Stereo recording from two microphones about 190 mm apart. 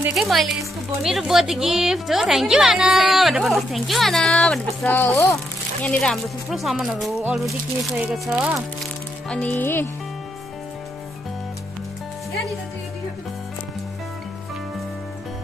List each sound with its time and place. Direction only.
0.0 s a woman's voice: centre (ahead or behind)
9.3 s speech: 10° left (ahead or behind)